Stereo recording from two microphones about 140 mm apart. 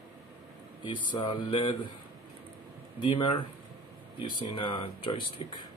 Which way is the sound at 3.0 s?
35° left (ahead or behind).